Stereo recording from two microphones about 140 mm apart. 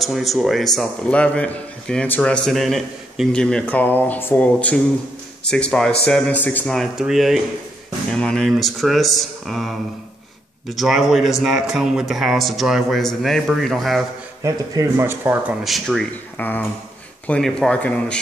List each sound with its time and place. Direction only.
0.0 s a man's voice: centre (ahead or behind)
6.7 s speech: centre (ahead or behind)
14.4 s speech: 20° right (ahead or behind)
15.6 s speech: centre (ahead or behind)
16.3 s a man's voice: 10° left (ahead or behind)